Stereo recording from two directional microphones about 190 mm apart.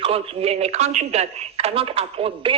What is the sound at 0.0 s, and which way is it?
A man's voice, 30° right (ahead or behind).